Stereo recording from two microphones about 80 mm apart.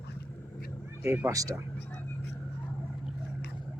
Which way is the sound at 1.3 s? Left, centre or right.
Right.